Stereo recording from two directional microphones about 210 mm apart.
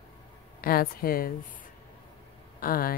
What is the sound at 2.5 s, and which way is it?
Speech, 45° left (ahead or behind).